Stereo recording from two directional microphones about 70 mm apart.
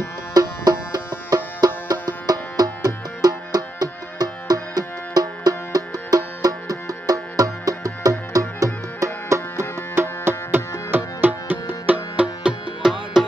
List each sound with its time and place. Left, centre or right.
0.3 s music: right
9.0 s music: right
10.9 s music: right
12.4 s music: centre